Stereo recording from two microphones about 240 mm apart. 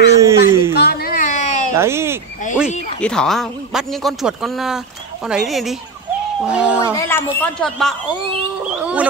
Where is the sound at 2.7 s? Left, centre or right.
Left.